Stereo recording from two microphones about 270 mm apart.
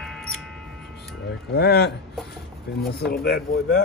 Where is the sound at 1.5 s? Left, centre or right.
Left.